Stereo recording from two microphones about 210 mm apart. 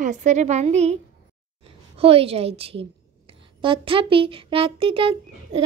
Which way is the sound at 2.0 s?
25° right (ahead or behind).